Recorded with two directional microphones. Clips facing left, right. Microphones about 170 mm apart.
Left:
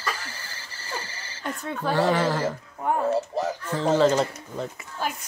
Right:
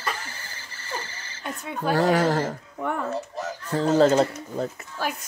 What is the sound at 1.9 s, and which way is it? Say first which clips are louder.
Speech: right 2 dB; 40° right (ahead or behind).